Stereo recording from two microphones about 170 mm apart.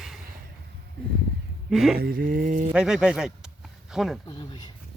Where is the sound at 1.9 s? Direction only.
60° right (ahead or behind).